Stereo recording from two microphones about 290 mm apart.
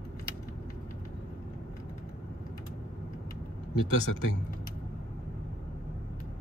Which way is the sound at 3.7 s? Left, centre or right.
Left.